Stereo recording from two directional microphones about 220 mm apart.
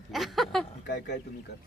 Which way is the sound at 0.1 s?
Centre (ahead or behind).